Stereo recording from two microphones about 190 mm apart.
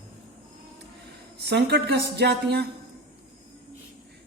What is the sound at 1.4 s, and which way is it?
A woman's voice, 60° right (ahead or behind).